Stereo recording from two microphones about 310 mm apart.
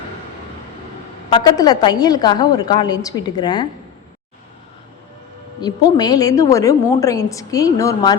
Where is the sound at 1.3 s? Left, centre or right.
Centre.